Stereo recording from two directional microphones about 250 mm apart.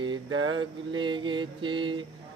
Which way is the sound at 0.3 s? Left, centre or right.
Right.